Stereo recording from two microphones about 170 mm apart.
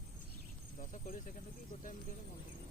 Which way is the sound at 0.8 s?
50° left (ahead or behind).